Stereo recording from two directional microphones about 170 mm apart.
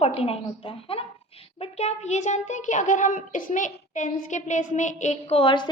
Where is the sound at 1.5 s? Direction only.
40° left (ahead or behind).